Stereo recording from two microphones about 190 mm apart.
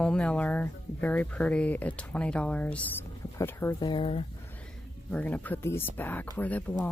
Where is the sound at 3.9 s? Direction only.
30° left (ahead or behind).